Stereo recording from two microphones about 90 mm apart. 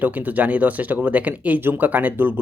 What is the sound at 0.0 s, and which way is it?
Speech, 20° right (ahead or behind).